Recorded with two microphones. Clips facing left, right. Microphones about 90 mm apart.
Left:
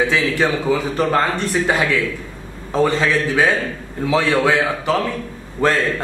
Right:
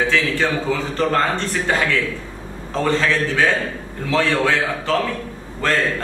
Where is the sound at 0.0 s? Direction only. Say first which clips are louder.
Left 2 dB; 15° left (ahead or behind).